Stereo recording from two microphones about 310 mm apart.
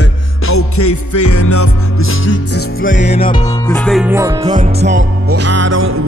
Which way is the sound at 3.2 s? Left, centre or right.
Centre.